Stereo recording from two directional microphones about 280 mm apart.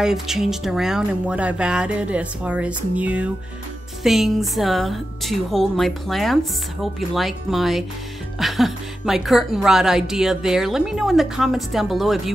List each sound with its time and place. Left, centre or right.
0.0 s speech: centre